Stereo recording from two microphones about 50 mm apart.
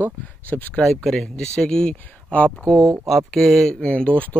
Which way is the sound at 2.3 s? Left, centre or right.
Left.